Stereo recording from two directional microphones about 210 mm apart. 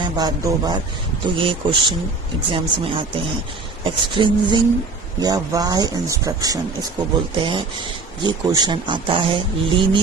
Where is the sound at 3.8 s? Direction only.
25° right (ahead or behind).